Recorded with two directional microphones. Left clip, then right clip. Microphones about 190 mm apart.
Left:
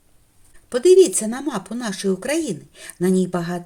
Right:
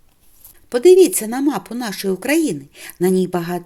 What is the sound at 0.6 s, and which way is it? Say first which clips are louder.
A woman's voice: right 3 dB; 30° right (ahead or behind).